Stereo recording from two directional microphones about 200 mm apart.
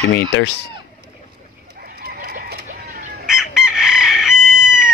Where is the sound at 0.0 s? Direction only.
50° left (ahead or behind).